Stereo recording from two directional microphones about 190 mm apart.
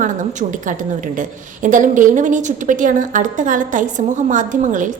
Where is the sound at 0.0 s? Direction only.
40° right (ahead or behind).